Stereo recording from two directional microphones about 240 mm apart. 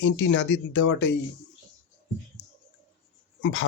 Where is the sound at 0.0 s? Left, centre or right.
Left.